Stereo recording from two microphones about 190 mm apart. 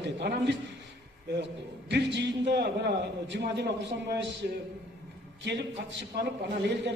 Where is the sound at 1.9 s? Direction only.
65° right (ahead or behind).